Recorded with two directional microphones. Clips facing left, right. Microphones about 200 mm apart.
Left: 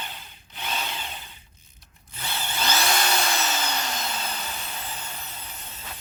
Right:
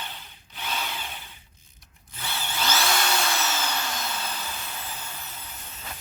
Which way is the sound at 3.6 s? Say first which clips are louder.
Left 1 dB; 20° left (ahead or behind).